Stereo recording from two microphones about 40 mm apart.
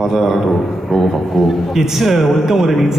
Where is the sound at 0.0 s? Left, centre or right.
Centre.